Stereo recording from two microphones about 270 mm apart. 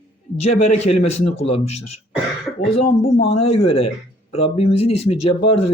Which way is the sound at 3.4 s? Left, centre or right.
Left.